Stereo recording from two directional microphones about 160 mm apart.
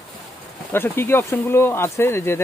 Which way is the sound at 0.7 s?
15° left (ahead or behind).